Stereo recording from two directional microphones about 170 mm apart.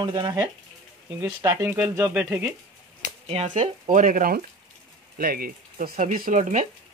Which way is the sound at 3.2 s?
35° right (ahead or behind).